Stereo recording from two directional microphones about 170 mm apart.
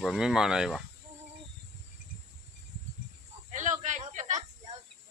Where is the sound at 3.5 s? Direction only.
45° right (ahead or behind).